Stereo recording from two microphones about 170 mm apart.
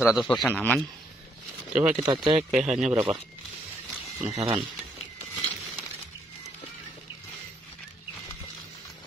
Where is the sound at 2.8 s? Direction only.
35° right (ahead or behind).